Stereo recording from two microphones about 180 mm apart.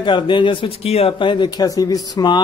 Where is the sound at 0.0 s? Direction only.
25° left (ahead or behind).